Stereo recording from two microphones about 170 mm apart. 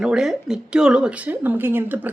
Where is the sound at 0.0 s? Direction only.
5° right (ahead or behind).